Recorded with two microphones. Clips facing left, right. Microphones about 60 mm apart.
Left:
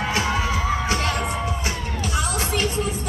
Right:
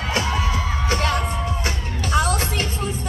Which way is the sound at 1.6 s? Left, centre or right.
Right.